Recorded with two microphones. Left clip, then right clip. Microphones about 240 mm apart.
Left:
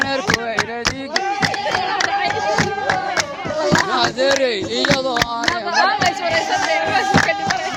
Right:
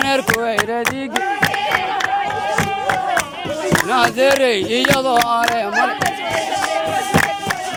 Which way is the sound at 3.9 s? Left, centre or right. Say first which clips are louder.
Right 3 dB; right.